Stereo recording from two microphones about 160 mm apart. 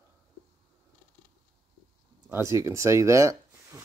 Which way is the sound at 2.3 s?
15° right (ahead or behind).